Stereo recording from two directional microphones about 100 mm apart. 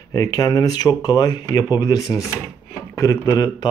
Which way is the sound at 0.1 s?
40° left (ahead or behind).